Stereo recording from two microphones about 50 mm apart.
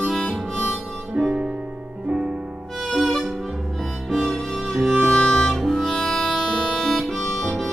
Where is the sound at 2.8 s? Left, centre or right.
Centre.